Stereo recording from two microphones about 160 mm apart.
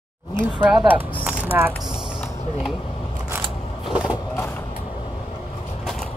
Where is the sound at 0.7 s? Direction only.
10° right (ahead or behind).